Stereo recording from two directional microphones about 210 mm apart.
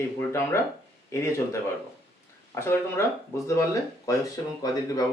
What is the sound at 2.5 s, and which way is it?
Speech, 10° left (ahead or behind).